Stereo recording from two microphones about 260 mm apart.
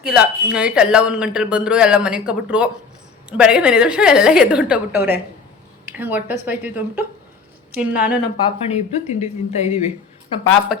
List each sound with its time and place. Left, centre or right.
0.0 s speech: centre
8.4 s a woman's voice: left
10.7 s speech: centre